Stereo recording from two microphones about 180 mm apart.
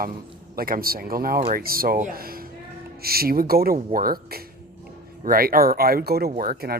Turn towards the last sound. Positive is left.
turn(degrees=-55)  # may be behind; listen again after turning